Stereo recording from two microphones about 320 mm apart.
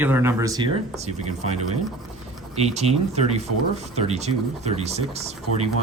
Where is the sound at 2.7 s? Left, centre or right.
Centre.